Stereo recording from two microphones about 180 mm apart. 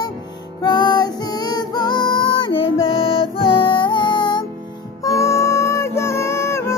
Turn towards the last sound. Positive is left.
turn(degrees=15)  # may be behind; listen again after turning